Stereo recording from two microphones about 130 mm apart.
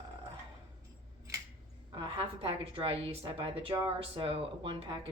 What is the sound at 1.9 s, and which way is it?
A woman's voice, 40° right (ahead or behind).